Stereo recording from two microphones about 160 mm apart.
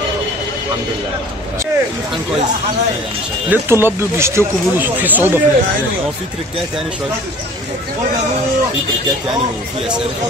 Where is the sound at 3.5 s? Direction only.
15° right (ahead or behind).